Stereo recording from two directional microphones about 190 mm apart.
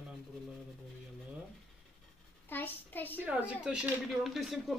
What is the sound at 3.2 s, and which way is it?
A man's voice, 5° right (ahead or behind).